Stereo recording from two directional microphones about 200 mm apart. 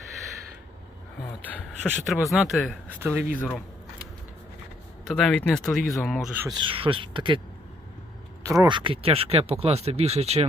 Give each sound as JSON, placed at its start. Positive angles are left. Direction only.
{"t": 1.5, "sound": "speech", "side_deg": 0}
{"t": 3.0, "sound": "speech", "side_deg": -10}
{"t": 5.0, "sound": "speech", "side_deg": 0}
{"t": 6.5, "sound": "speech", "side_deg": -25}
{"t": 8.4, "sound": "speech", "side_deg": -20}